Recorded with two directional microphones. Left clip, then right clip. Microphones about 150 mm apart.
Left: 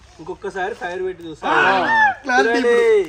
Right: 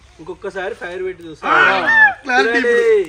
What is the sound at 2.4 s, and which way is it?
Speech, centre (ahead or behind).